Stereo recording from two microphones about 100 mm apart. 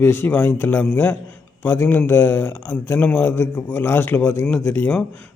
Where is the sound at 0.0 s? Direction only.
20° left (ahead or behind).